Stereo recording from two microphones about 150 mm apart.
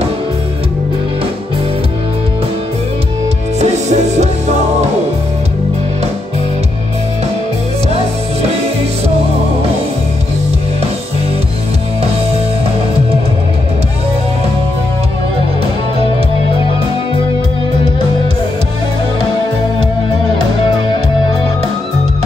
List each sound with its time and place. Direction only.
3.5 s music: 50° right (ahead or behind)